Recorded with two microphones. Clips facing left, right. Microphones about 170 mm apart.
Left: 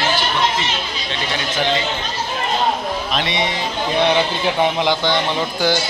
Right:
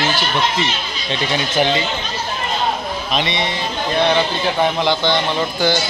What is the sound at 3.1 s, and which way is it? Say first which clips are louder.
A man's voice: right 3 dB; 10° left (ahead or behind).